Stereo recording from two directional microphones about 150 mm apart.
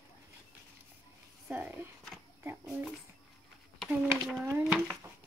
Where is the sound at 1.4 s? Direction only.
10° right (ahead or behind).